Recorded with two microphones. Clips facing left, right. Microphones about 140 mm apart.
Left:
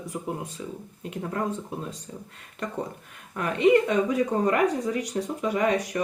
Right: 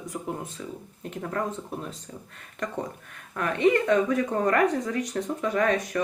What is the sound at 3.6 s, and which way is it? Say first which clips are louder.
Speech: left 1 dB; 15° left (ahead or behind).